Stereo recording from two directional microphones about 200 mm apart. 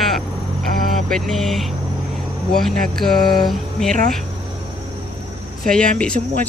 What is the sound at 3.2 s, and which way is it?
Mantra, 20° left (ahead or behind).